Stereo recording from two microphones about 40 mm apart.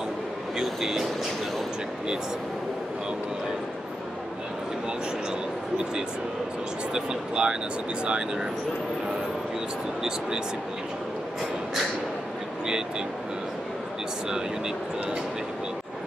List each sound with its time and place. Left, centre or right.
0.6 s vehicle: centre
6.9 s speech: centre